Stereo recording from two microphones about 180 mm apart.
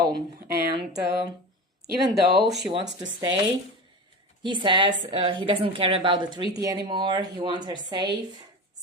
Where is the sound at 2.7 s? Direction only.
25° right (ahead or behind).